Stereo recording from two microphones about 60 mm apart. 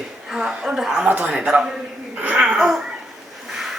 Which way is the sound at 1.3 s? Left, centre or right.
Centre.